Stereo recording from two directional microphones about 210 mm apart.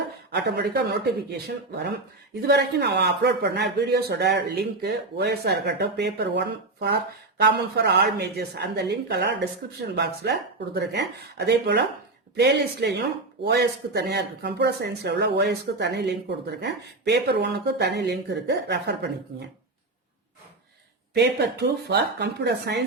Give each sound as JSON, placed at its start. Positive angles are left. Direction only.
{"t": 0.3, "sound": "a man's voice", "side_deg": -50}
{"t": 21.1, "sound": "a man's voice", "side_deg": -55}